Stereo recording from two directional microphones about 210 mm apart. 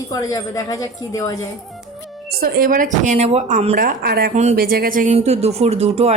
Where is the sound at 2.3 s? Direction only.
45° right (ahead or behind).